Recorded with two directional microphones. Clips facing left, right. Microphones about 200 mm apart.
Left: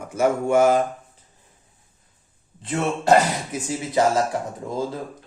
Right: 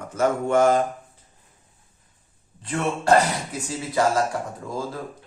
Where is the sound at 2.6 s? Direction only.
20° left (ahead or behind).